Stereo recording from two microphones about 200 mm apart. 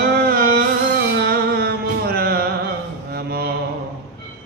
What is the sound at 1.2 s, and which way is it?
Music, 50° right (ahead or behind).